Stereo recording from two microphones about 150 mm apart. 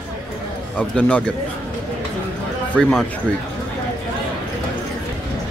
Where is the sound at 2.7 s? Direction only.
5° left (ahead or behind).